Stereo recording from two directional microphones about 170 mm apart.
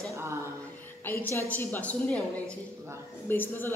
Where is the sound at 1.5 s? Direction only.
10° left (ahead or behind).